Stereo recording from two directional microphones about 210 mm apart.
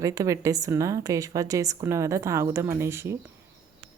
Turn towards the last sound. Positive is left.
turn(degrees=-10)  # may be behind; listen again after turning